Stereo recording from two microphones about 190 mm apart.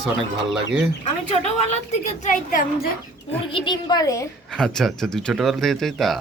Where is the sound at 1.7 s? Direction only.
40° left (ahead or behind).